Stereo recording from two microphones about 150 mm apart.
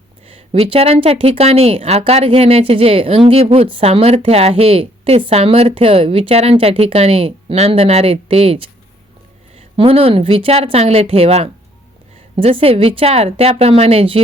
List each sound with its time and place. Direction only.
0.3 s a woman's voice: 40° right (ahead or behind)